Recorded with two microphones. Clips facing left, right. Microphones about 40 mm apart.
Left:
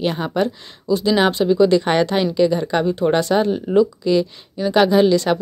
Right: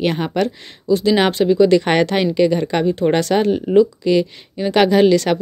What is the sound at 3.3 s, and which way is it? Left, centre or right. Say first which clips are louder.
Speech: right 1 dB; right.